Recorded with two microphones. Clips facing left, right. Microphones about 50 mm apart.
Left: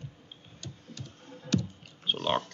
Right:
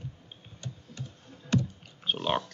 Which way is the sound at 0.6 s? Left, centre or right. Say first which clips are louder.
Right 3 dB; right.